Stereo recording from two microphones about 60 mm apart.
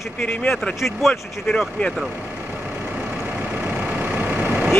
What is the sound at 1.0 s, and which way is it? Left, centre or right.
Speech, centre.